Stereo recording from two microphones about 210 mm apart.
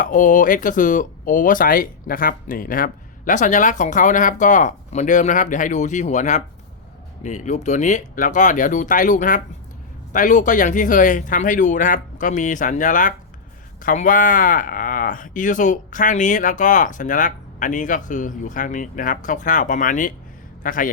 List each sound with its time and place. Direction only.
0.0 s speech: 40° left (ahead or behind)